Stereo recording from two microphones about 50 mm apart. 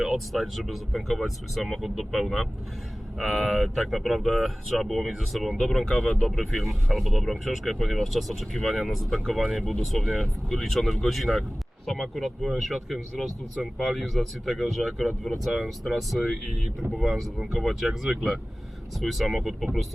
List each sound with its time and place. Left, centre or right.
0.0 s speech: centre